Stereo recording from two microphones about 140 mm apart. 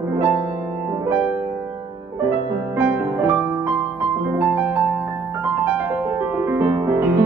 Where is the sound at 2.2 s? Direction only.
15° right (ahead or behind).